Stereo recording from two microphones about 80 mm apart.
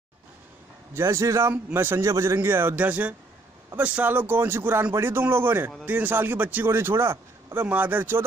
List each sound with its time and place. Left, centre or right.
0.9 s a man's voice: right
1.5 s a man's voice: right
2.3 s a man's voice: right
7.6 s a man's voice: right